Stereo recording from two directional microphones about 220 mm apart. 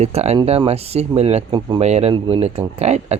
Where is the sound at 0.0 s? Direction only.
30° right (ahead or behind).